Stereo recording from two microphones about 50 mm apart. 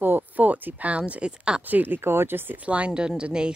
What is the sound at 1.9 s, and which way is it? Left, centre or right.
Speech, right.